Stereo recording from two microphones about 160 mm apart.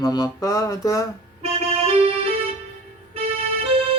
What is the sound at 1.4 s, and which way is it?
Music, 40° right (ahead or behind).